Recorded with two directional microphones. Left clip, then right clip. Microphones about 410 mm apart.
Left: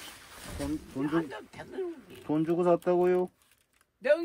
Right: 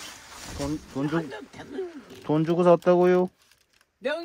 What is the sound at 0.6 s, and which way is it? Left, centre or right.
Speech, centre.